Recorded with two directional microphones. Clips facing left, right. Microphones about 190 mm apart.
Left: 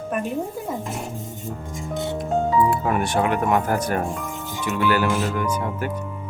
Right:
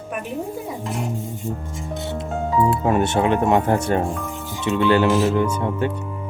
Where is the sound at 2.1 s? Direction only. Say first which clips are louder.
Left 1 dB; 25° right (ahead or behind).